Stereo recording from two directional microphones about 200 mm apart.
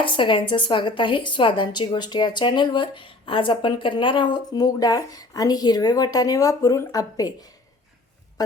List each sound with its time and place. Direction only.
0.0 s a woman's voice: 25° left (ahead or behind)